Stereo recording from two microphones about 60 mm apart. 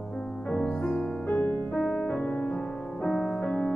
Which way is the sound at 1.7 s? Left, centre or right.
Centre.